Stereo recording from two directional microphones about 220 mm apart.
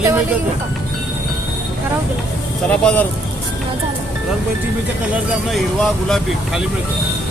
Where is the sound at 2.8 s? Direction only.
5° left (ahead or behind).